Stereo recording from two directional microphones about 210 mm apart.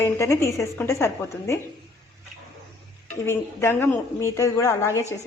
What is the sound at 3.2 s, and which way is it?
A woman's voice, 10° left (ahead or behind).